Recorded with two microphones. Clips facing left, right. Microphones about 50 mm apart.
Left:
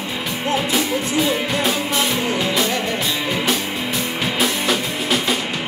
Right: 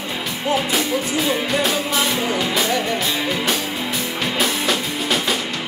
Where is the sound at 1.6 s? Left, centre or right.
Centre.